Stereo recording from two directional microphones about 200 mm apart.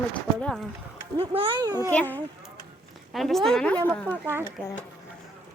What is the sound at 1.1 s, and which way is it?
Speech, 25° right (ahead or behind).